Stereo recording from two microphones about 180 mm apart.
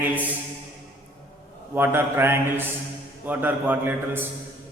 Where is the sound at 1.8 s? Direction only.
15° right (ahead or behind).